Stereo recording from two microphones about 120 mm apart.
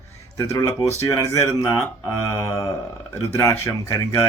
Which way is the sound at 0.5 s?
30° left (ahead or behind).